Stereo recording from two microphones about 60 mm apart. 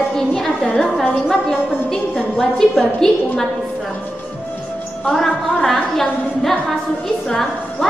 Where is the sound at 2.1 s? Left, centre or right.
Centre.